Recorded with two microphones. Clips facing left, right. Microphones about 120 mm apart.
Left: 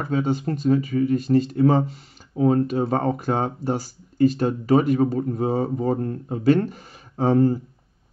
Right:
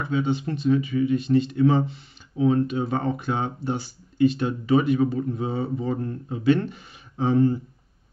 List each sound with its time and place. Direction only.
0.0 s speech: 40° left (ahead or behind)